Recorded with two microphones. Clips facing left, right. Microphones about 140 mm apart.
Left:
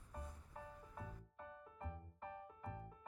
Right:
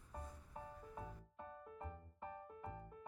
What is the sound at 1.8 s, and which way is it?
Music, 10° right (ahead or behind).